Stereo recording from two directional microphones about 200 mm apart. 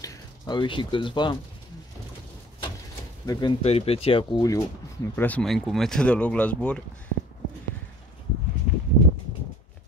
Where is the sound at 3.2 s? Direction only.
20° left (ahead or behind).